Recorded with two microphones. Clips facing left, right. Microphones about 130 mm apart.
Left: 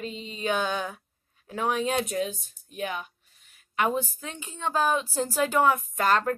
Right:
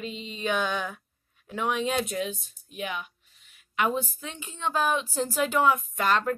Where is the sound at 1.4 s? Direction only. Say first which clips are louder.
Left 1 dB; 40° left (ahead or behind).